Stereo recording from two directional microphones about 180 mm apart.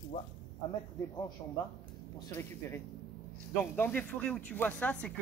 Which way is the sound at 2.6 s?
15° left (ahead or behind).